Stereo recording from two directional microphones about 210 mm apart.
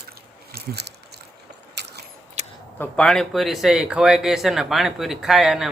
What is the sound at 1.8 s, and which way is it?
Biting, 55° right (ahead or behind).